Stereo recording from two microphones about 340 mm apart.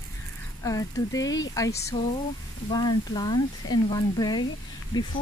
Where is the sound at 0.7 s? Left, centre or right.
Centre.